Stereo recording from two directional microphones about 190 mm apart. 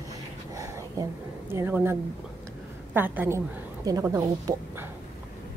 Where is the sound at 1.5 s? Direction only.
10° right (ahead or behind).